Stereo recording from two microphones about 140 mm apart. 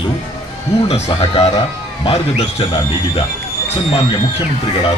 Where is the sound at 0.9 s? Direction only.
50° left (ahead or behind).